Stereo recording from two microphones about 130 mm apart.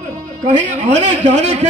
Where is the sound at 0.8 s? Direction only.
60° right (ahead or behind).